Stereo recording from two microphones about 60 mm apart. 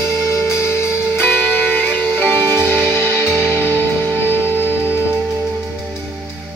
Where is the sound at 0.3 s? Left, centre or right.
Left.